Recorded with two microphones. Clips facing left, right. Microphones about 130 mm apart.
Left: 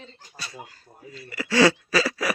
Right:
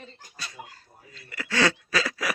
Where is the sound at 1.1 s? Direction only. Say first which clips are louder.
Left 6 dB; 10° left (ahead or behind).